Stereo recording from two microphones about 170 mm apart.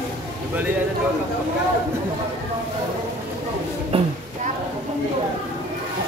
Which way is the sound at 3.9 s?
35° right (ahead or behind).